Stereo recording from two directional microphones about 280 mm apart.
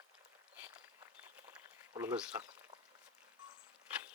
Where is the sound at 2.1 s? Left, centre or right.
Centre.